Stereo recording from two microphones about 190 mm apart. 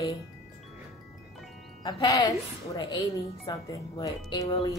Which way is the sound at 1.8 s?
25° left (ahead or behind).